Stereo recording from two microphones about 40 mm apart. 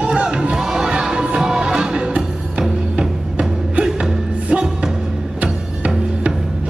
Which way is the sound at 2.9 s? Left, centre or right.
Right.